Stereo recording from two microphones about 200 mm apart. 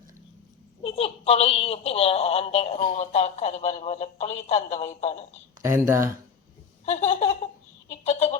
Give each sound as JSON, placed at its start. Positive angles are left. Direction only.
{"t": 0.8, "sound": "a woman's voice", "side_deg": 30}
{"t": 5.6, "sound": "speech", "side_deg": -15}
{"t": 6.8, "sound": "a woman's voice", "side_deg": 35}
{"t": 7.9, "sound": "a sound", "side_deg": 30}